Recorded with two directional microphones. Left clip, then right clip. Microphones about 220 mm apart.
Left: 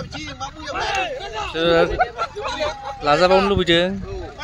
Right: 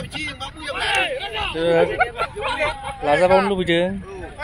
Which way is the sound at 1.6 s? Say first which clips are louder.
Left 1 dB; centre (ahead or behind).